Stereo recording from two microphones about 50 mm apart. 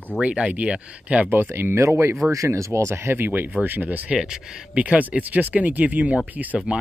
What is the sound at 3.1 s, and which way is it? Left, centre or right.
Speech, right.